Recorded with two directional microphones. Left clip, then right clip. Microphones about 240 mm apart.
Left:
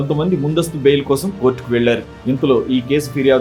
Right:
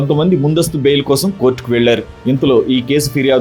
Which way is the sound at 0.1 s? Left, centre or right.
Right.